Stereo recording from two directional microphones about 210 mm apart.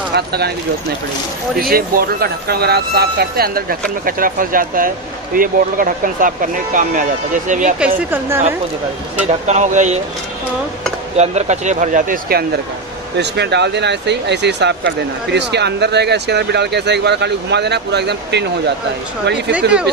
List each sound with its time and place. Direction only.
0.1 s speech: 50° right (ahead or behind)
1.6 s speech: 45° right (ahead or behind)
8.1 s a woman's voice: 10° right (ahead or behind)
9.5 s speech: 35° right (ahead or behind)
11.1 s speech: 30° right (ahead or behind)
13.2 s speech: 55° right (ahead or behind)
19.5 s speech: 5° right (ahead or behind)